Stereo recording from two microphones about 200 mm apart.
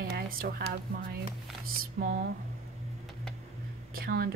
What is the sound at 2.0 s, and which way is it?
Speech, 50° right (ahead or behind).